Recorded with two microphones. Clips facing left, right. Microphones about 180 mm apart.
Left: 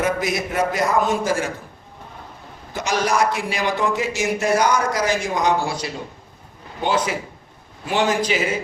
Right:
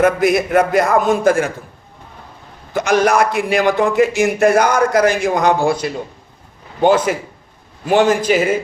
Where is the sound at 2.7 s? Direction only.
55° right (ahead or behind).